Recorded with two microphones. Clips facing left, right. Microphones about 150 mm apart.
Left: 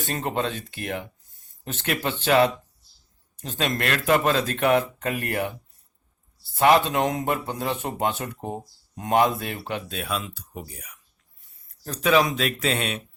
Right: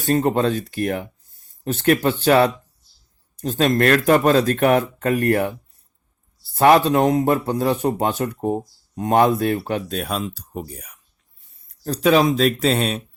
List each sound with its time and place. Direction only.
0.0 s a man's voice: 35° right (ahead or behind)
6.5 s a man's voice: 40° right (ahead or behind)
11.9 s a man's voice: 35° right (ahead or behind)